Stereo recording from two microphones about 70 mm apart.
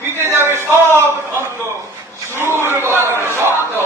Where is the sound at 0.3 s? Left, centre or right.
Right.